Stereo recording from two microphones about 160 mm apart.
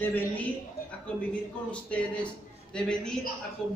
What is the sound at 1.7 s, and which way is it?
A man's voice, 10° left (ahead or behind).